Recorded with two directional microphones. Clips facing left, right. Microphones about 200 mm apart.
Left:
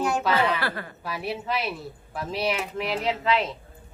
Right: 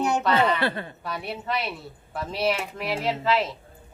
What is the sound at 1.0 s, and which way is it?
Speech, centre (ahead or behind).